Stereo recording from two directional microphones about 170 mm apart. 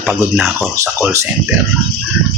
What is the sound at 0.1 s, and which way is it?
Speech, centre (ahead or behind).